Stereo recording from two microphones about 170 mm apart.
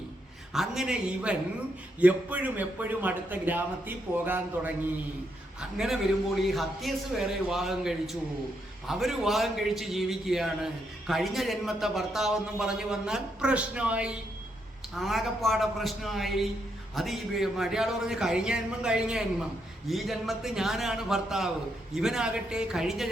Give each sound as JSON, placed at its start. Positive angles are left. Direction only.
{"t": 0.5, "sound": "a man's voice", "side_deg": 0}